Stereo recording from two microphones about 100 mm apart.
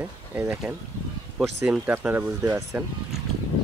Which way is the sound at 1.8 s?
20° right (ahead or behind).